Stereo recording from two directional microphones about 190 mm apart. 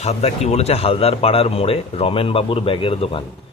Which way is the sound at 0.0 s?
35° left (ahead or behind).